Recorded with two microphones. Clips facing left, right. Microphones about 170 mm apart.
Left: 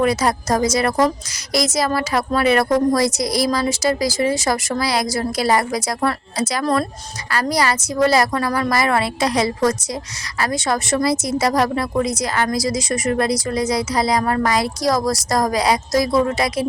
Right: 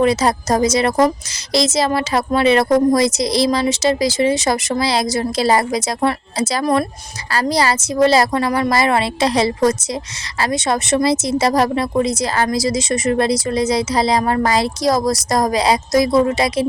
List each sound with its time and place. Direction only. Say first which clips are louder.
0.0 s a woman's voice: right 3 dB; 25° right (ahead or behind)